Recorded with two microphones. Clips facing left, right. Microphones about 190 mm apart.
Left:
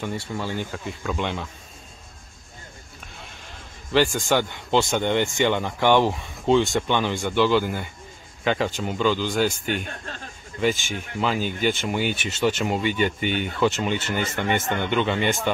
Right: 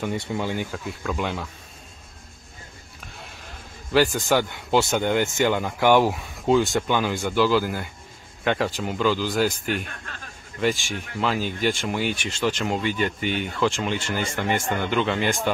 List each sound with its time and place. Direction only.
0.0 s speech: 15° right (ahead or behind)
0.7 s speech: centre (ahead or behind)
3.9 s speech: 5° right (ahead or behind)
9.8 s speech: 30° left (ahead or behind)
10.6 s speech: centre (ahead or behind)